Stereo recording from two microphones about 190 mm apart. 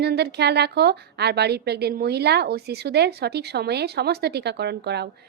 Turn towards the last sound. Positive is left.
turn(degrees=-60)  # may be behind; listen again after turning